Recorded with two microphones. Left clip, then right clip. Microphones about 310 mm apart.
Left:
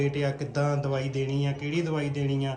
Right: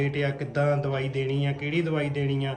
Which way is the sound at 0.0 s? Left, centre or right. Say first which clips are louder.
Even; centre.